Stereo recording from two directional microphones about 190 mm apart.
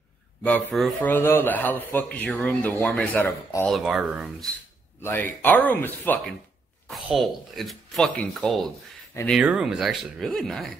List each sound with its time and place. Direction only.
0.4 s speech: 10° left (ahead or behind)
3.7 s speech: centre (ahead or behind)
5.0 s speech: 10° left (ahead or behind)